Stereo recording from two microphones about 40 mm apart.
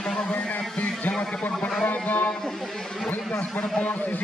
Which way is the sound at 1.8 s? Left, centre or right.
Left.